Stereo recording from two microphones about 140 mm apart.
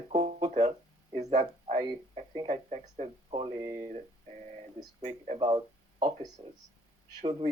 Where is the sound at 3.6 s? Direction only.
20° right (ahead or behind).